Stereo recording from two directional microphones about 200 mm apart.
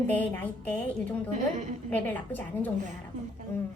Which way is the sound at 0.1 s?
10° left (ahead or behind).